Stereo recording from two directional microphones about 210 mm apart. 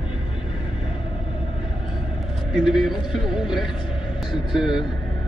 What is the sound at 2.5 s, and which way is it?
Speech, centre (ahead or behind).